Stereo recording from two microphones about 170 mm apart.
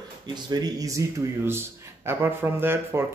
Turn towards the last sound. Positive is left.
turn(degrees=-15)  # may be behind; listen again after turning